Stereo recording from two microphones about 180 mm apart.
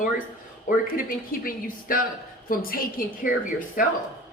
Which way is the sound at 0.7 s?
50° left (ahead or behind).